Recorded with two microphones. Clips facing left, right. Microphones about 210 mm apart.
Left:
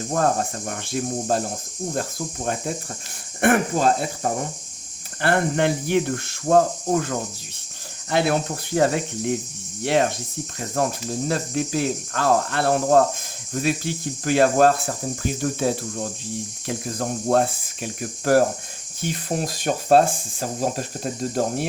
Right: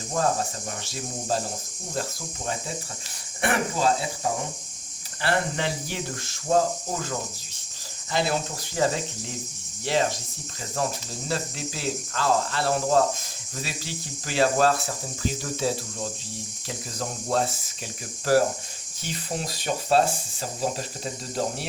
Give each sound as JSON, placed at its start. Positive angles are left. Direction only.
{"t": 0.1, "sound": "speech", "side_deg": 55}
{"t": 8.1, "sound": "speech", "side_deg": 60}